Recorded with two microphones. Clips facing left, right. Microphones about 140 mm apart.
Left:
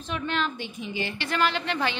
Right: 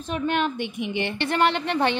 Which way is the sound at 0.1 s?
55° right (ahead or behind).